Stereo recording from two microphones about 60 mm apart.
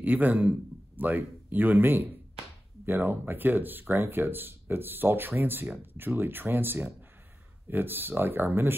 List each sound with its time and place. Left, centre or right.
0.0 s a man's voice: right